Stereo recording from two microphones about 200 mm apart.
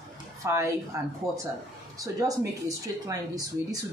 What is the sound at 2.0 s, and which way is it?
Speech, 15° right (ahead or behind).